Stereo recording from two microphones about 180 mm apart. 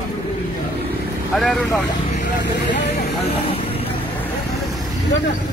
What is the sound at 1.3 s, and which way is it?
Speech, centre (ahead or behind).